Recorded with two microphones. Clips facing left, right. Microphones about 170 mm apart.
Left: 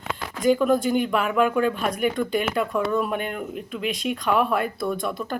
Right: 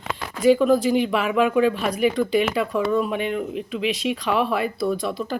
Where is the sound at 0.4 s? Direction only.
Centre (ahead or behind).